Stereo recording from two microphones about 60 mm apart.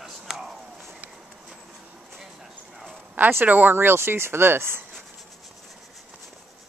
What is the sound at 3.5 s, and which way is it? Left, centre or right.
Speech, right.